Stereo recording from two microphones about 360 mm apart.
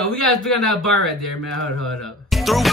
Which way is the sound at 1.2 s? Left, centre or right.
Left.